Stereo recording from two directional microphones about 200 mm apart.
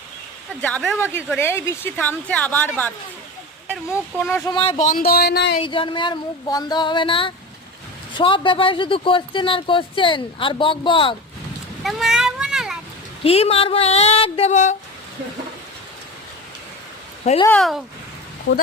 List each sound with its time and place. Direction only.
0.6 s a woman's voice: 5° left (ahead or behind)
4.3 s a woman's voice: 15° left (ahead or behind)
4.5 s speech: 25° left (ahead or behind)
4.8 s a sound: 45° left (ahead or behind)
5.6 s speech: 25° left (ahead or behind)
11.8 s vehicle: centre (ahead or behind)
13.2 s speech: 30° left (ahead or behind)
17.2 s speech: 30° left (ahead or behind)
17.6 s speech: centre (ahead or behind)
18.5 s speech: 60° left (ahead or behind)